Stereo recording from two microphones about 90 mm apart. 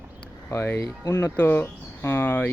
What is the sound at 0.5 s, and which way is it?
Speech, 25° left (ahead or behind).